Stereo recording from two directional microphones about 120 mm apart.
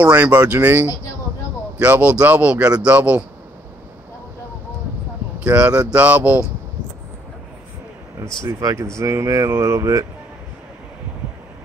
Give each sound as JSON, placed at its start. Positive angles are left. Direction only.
{"t": 0.0, "sound": "a man's voice", "side_deg": -10}
{"t": 5.4, "sound": "a man's voice", "side_deg": -10}
{"t": 8.5, "sound": "speech", "side_deg": -30}